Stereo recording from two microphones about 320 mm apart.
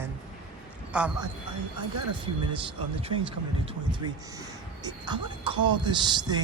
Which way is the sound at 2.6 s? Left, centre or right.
Centre.